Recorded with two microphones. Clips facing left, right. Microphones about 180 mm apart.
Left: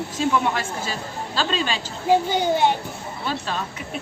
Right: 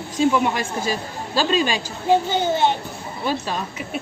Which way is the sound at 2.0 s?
10° left (ahead or behind).